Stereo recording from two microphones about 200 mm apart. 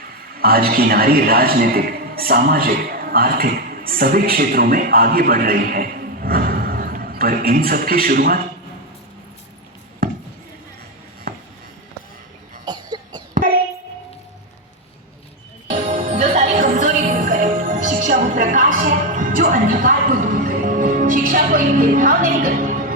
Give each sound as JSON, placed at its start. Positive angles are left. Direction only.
{"t": 0.3, "sound": "a man's voice", "side_deg": -50}
{"t": 10.0, "sound": "a sound", "side_deg": -50}
{"t": 12.6, "sound": "cough", "side_deg": -20}
{"t": 15.9, "sound": "music", "side_deg": -35}